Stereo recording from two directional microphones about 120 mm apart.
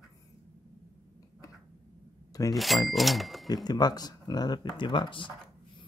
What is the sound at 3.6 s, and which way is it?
Speech, 35° left (ahead or behind).